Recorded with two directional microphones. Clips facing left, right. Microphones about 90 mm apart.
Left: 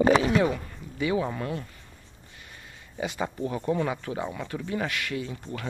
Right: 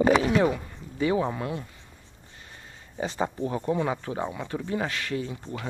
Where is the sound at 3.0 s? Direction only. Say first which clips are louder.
Right 2 dB; 30° right (ahead or behind).